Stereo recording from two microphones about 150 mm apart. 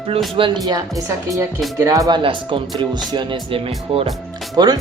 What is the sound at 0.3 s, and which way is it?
Speech, 30° right (ahead or behind).